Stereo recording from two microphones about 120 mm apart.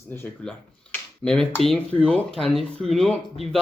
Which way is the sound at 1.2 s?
5° left (ahead or behind).